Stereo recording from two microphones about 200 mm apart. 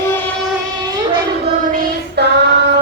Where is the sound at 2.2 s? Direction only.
55° right (ahead or behind).